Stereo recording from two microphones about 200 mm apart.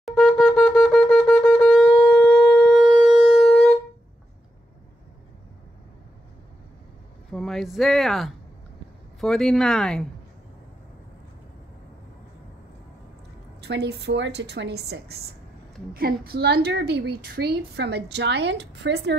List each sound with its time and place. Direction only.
0.0 s wind instrument: centre (ahead or behind)
3.0 s shofar: centre (ahead or behind)
7.3 s speech: centre (ahead or behind)
13.6 s a woman's voice: 55° right (ahead or behind)